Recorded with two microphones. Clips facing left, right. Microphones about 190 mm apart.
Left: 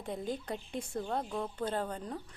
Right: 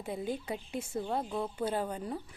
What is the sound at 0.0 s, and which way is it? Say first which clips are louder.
A woman's voice: right 1 dB; 5° right (ahead or behind).